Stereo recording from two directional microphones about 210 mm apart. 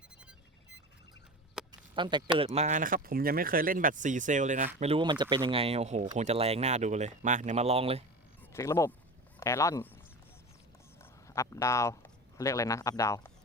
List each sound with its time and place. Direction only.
1.6 s a sound: centre (ahead or behind)
2.0 s speech: 20° right (ahead or behind)
4.8 s speech: 25° right (ahead or behind)
8.4 s speech: 15° left (ahead or behind)
11.0 s speech: 15° left (ahead or behind)